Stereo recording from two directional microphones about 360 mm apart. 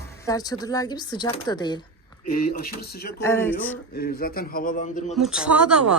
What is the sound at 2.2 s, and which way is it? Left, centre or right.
Speech, left.